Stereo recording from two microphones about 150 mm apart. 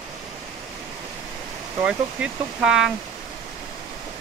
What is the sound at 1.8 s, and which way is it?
Speech, 5° right (ahead or behind).